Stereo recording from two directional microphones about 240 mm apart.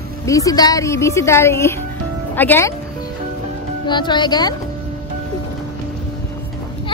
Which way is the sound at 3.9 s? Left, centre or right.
Centre.